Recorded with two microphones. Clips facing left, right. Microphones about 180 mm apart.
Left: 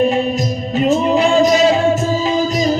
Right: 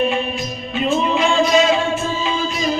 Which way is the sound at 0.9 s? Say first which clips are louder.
Left 4 dB; 40° left (ahead or behind).